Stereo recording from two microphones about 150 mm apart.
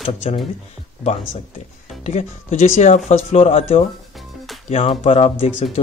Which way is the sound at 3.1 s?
45° left (ahead or behind).